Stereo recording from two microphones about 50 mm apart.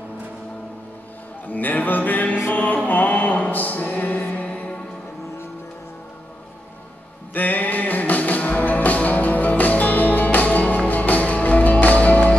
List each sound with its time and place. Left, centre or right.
1.5 s music: left
2.5 s mantra: left
3.4 s music: left
7.3 s music: left